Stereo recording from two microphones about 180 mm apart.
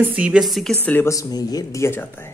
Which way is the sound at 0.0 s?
10° right (ahead or behind).